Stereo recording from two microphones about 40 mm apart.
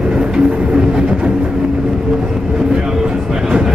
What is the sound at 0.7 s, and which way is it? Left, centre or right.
Train, right.